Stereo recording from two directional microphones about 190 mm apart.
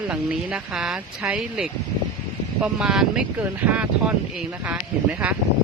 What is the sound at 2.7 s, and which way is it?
Speech, 5° right (ahead or behind).